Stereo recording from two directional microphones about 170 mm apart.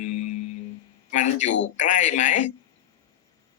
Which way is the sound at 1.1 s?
45° left (ahead or behind).